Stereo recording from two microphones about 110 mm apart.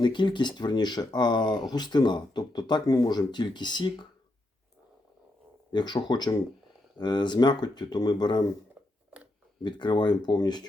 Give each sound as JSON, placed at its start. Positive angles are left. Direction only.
{"t": 0.0, "sound": "speech", "side_deg": 45}
{"t": 5.7, "sound": "speech", "side_deg": 40}
{"t": 9.6, "sound": "speech", "side_deg": 45}